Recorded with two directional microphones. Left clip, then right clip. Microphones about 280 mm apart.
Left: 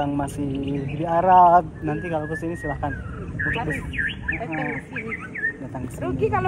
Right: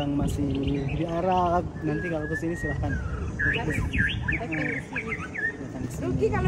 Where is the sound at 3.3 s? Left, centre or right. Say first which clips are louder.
Left 1 dB; right.